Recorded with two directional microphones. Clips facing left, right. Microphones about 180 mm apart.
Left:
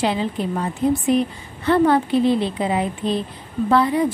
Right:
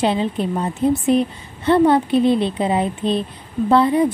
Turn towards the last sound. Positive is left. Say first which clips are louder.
# right 3 dB
turn(degrees=-25)  # may be behind; listen again after turning